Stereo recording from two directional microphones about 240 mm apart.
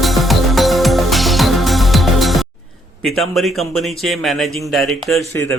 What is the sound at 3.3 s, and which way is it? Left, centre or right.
Speech, centre.